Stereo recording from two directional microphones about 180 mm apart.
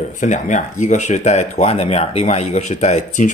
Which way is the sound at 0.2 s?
45° left (ahead or behind).